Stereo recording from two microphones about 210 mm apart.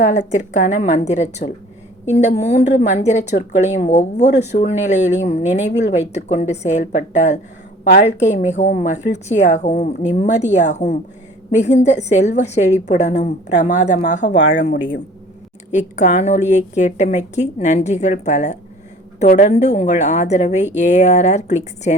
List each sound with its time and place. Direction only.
0.0 s a woman's voice: 35° left (ahead or behind)
7.9 s a woman's voice: 50° left (ahead or behind)
8.2 s a woman's voice: 35° left (ahead or behind)
15.7 s a woman's voice: 35° left (ahead or behind)